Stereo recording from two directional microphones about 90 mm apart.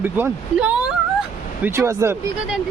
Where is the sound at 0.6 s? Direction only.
10° right (ahead or behind).